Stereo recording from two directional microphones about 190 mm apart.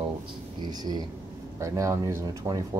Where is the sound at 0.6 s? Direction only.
20° right (ahead or behind).